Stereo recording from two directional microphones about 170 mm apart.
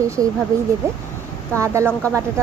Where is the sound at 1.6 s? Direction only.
15° right (ahead or behind).